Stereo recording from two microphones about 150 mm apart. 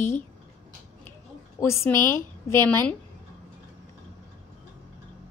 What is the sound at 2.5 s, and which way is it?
Speech, 15° left (ahead or behind).